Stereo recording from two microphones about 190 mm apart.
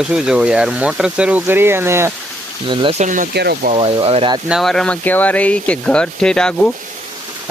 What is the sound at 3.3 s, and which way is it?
Speech, 55° right (ahead or behind).